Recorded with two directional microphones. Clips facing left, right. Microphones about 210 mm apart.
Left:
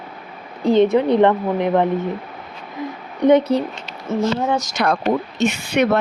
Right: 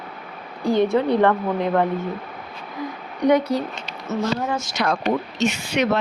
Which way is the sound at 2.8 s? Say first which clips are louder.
Left 2 dB; 20° left (ahead or behind).